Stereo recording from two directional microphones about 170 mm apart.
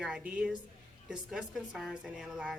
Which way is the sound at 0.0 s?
5° right (ahead or behind).